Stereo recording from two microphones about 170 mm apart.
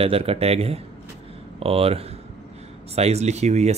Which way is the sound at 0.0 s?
35° right (ahead or behind).